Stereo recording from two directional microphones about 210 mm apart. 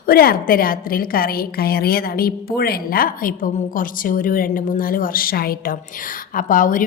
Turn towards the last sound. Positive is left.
turn(degrees=40)  # may be behind; listen again after turning